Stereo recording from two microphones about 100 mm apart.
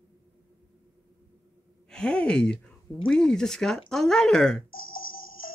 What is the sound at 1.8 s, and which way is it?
Speech, 10° left (ahead or behind).